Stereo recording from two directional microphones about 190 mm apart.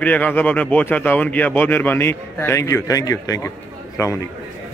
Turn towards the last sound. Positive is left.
turn(degrees=15)  # may be behind; listen again after turning